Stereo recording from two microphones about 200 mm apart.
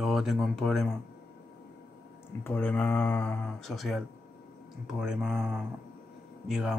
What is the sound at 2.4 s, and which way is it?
Speech, 5° left (ahead or behind).